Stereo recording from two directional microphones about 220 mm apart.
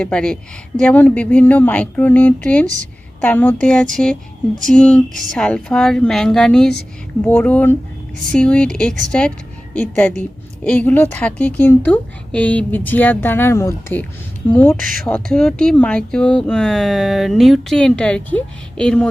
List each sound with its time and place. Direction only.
0.0 s a woman's voice: 5° left (ahead or behind)
14.8 s speech: 40° right (ahead or behind)
15.0 s speech: 5° left (ahead or behind)